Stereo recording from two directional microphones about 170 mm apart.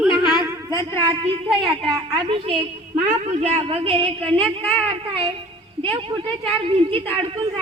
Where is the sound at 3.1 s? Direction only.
45° right (ahead or behind).